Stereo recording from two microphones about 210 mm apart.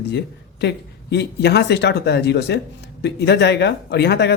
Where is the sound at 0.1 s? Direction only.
50° left (ahead or behind).